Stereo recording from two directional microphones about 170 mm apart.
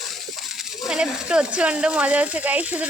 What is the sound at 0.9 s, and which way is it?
Speech, 5° right (ahead or behind).